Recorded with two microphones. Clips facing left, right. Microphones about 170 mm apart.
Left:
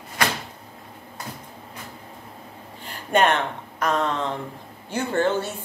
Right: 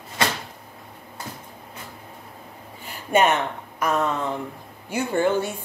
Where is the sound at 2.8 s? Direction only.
10° right (ahead or behind).